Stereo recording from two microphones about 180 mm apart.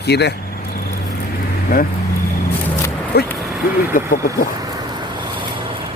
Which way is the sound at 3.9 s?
50° left (ahead or behind).